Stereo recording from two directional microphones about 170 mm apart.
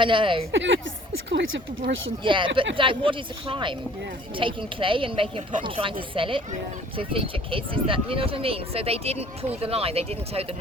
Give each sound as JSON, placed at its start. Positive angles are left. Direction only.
{"t": 0.0, "sound": "speech", "side_deg": -30}
{"t": 0.5, "sound": "speech", "side_deg": -90}
{"t": 2.2, "sound": "speech", "side_deg": -30}